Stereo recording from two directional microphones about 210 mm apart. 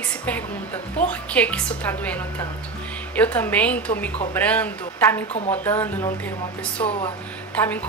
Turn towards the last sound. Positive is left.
turn(degrees=5)  # may be behind; listen again after turning